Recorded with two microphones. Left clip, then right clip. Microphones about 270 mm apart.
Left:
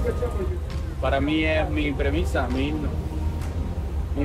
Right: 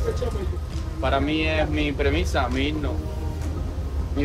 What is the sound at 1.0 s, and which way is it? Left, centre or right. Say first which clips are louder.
A man's voice: even; centre.